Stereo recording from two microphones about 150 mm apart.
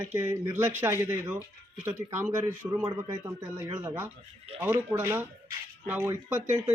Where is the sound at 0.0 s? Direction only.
15° right (ahead or behind).